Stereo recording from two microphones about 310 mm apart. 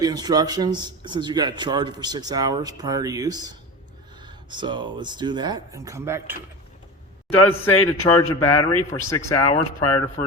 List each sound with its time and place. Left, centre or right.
0.0 s speech: centre
7.6 s speech: centre